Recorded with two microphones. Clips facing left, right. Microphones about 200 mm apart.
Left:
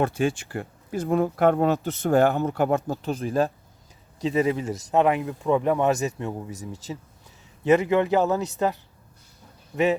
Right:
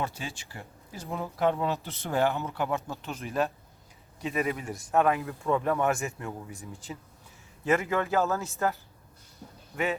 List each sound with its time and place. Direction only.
0.0 s speech: 55° left (ahead or behind); by 6.3 s 20° left (ahead or behind)
6.5 s speech: 40° left (ahead or behind)
7.6 s speech: 20° left (ahead or behind)